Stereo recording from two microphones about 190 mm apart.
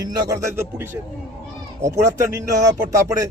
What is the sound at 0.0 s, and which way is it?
A man's voice, 20° right (ahead or behind).